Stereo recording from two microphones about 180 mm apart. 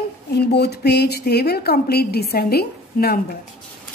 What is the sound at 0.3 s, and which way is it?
A woman's voice, 65° left (ahead or behind).